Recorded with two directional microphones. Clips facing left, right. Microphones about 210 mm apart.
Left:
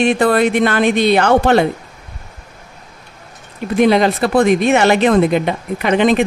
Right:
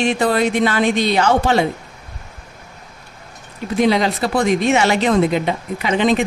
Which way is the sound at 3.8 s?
55° left (ahead or behind).